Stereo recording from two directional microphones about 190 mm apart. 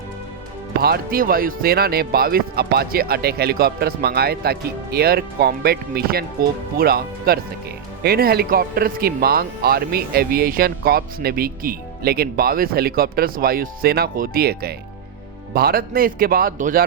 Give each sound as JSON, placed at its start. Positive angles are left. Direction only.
{"t": 0.8, "sound": "speech", "side_deg": -50}